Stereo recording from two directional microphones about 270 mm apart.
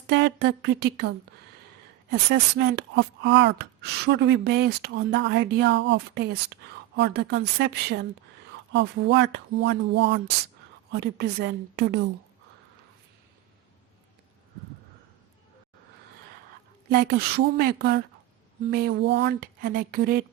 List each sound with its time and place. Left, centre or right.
0.1 s speech: right
16.9 s speech: right